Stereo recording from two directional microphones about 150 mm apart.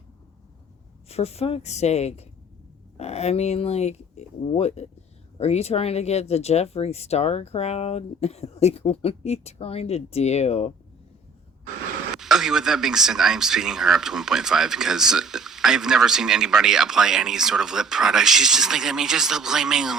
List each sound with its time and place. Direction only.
1.0 s speech: 45° left (ahead or behind)
12.1 s speech: 5° right (ahead or behind)